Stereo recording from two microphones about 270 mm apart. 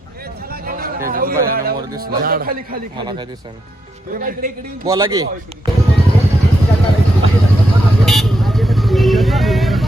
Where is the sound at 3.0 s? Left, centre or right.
Centre.